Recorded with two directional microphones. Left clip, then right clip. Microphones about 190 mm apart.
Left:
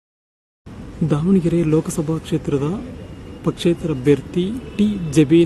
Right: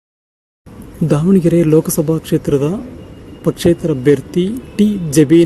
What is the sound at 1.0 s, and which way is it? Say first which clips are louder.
Speech: right 6 dB; 30° right (ahead or behind).